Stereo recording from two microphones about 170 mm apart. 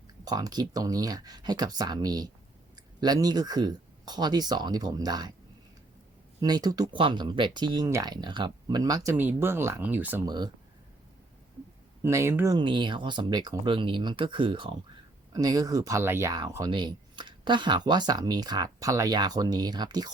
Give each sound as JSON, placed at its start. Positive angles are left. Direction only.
{"t": 0.3, "sound": "speech", "side_deg": -20}
{"t": 6.4, "sound": "speech", "side_deg": -25}
{"t": 10.2, "sound": "speech", "side_deg": -25}
{"t": 12.0, "sound": "speech", "side_deg": -15}
{"t": 12.5, "sound": "speech", "side_deg": -30}